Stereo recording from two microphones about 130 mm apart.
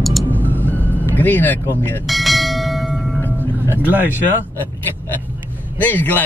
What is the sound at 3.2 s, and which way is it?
Music, 15° left (ahead or behind).